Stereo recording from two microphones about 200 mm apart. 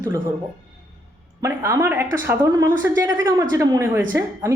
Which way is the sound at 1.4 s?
15° right (ahead or behind).